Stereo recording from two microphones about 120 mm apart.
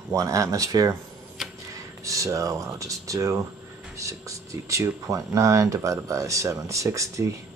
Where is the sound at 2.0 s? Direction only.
25° right (ahead or behind).